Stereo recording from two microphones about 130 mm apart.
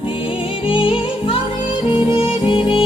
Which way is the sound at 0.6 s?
40° left (ahead or behind).